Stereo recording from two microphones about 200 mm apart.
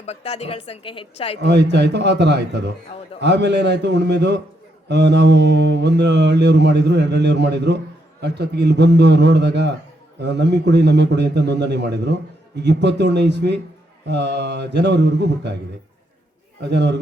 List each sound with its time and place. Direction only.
0.0 s a woman's voice: 30° left (ahead or behind)
1.4 s mantra: 60° right (ahead or behind)
16.6 s mantra: 60° right (ahead or behind)